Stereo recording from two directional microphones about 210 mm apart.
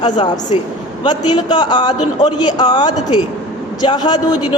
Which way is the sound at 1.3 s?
20° left (ahead or behind).